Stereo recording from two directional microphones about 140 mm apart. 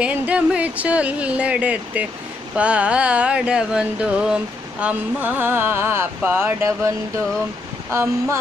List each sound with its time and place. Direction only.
0.0 s speech: 10° right (ahead or behind)
7.9 s speech: 20° right (ahead or behind)